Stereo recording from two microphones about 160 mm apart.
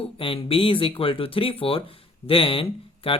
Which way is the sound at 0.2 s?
35° left (ahead or behind).